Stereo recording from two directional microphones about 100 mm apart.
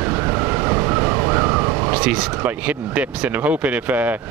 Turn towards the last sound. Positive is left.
turn(degrees=-15)  # may be behind; listen again after turning